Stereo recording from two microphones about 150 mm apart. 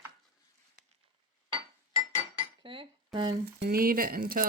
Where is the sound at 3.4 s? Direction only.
90° right; by 4.4 s 70° right (ahead or behind).